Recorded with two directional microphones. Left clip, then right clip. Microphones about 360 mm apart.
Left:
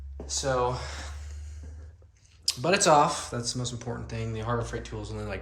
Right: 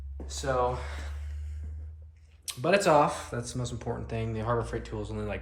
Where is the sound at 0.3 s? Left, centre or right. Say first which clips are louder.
Left 2 dB; centre.